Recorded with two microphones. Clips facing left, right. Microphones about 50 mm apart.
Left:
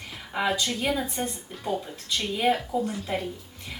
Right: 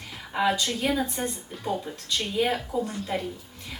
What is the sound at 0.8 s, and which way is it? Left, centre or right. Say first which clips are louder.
Speech: right 3 dB; centre.